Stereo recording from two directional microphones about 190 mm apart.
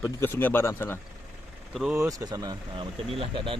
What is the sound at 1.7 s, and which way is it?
Speech, centre (ahead or behind).